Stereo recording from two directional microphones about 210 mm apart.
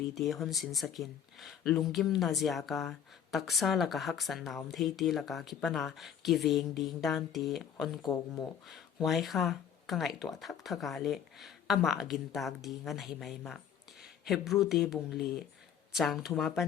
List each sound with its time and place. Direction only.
0.1 s speech: centre (ahead or behind)
8.0 s speech: 15° left (ahead or behind)
9.0 s speech: centre (ahead or behind)